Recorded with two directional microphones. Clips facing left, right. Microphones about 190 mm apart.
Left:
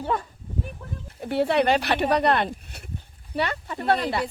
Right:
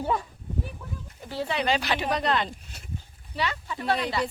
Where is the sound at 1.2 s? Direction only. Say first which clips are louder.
Left 8 dB; 65° left (ahead or behind).